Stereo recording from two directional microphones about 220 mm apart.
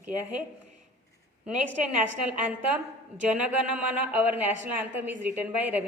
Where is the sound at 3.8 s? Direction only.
5° right (ahead or behind).